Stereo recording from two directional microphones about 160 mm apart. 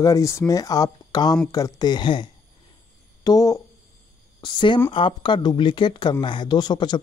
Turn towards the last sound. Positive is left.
turn(degrees=25)  # may be behind; listen again after turning